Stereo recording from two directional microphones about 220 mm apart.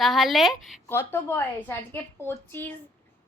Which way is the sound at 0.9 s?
10° left (ahead or behind).